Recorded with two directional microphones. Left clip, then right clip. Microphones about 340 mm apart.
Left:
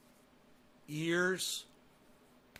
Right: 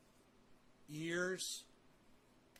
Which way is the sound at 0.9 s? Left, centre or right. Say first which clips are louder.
Left 8 dB; left.